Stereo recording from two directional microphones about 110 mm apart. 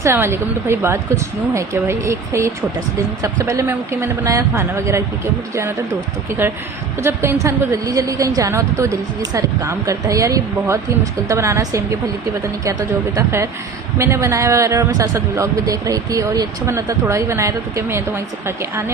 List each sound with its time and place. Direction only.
0.0 s a man's voice: 20° right (ahead or behind)
6.4 s a man's voice: 20° right (ahead or behind)
13.1 s a man's voice: 25° right (ahead or behind)